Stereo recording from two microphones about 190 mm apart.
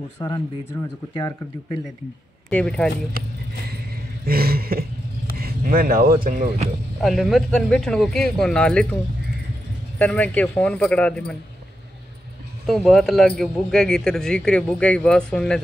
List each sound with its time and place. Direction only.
0.2 s speech: 25° left (ahead or behind)
2.5 s speech: 5° left (ahead or behind)
4.3 s a sound: 50° right (ahead or behind)
7.0 s speech: centre (ahead or behind)
9.9 s a man's voice: 10° left (ahead or behind)
12.6 s speech: centre (ahead or behind)